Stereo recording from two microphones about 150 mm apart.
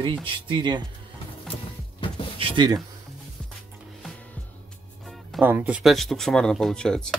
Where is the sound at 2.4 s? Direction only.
30° right (ahead or behind).